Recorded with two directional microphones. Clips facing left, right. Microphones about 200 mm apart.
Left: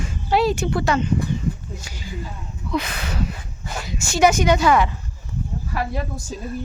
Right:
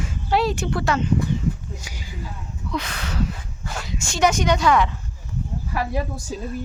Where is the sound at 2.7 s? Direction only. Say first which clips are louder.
Left 3 dB; 10° left (ahead or behind).